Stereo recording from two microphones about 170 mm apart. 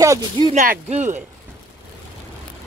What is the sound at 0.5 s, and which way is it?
Speech, 45° right (ahead or behind).